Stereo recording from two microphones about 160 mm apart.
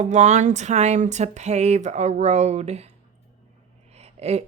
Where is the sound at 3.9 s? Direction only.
40° right (ahead or behind).